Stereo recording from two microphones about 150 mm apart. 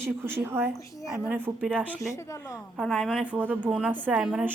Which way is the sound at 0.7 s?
20° left (ahead or behind).